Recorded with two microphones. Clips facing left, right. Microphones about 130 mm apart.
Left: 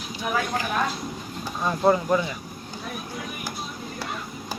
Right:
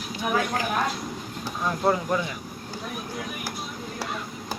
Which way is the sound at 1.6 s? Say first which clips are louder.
Left 3 dB; centre (ahead or behind).